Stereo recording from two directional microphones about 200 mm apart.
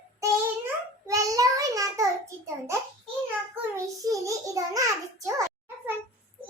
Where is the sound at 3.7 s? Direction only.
15° right (ahead or behind).